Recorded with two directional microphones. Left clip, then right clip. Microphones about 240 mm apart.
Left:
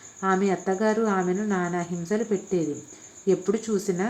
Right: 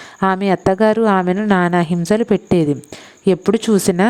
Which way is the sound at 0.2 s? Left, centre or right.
Right.